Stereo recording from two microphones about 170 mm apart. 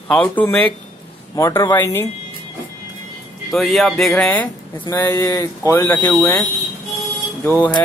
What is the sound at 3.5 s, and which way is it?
Speech, centre (ahead or behind).